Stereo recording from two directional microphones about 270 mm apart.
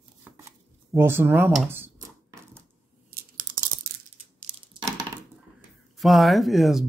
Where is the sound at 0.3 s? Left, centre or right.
Centre.